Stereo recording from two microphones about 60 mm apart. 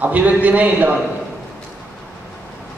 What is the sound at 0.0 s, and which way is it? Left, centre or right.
Speech, right.